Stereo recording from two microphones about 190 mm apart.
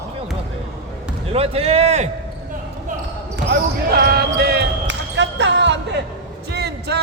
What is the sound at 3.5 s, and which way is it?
Basketball bounce, 55° right (ahead or behind).